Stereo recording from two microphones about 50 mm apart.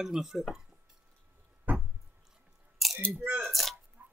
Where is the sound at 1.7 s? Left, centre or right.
Right.